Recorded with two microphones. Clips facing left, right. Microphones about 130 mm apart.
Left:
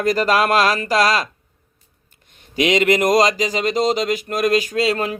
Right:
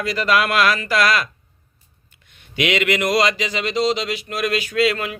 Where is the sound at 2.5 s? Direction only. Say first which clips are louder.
Left 4 dB; 35° left (ahead or behind).